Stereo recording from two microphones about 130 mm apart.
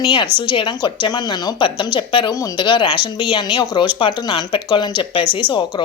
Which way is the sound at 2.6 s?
35° left (ahead or behind).